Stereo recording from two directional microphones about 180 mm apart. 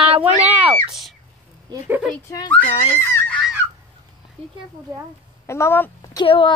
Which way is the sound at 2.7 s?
30° left (ahead or behind).